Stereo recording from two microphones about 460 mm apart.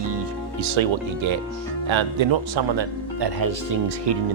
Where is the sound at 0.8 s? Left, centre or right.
Right.